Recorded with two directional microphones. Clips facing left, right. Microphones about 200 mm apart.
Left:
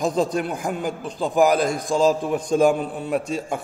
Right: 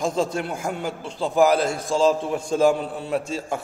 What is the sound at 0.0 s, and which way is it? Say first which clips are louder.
A man's voice: left 2 dB; 20° left (ahead or behind).